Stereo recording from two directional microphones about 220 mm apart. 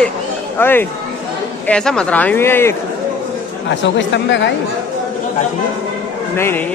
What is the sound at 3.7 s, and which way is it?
Speech, 55° left (ahead or behind).